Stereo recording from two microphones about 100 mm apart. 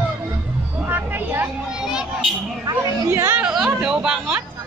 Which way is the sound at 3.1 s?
25° right (ahead or behind).